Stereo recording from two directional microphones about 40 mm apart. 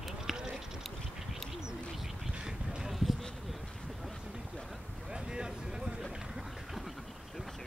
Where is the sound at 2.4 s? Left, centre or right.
Centre.